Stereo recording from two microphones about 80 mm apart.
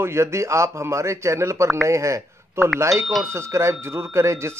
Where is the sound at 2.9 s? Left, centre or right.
Centre.